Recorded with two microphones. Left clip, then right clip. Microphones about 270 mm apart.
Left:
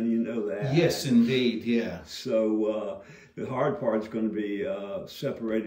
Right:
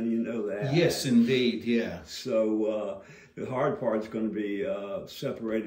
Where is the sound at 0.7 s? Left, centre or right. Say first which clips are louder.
Left 1 dB; centre.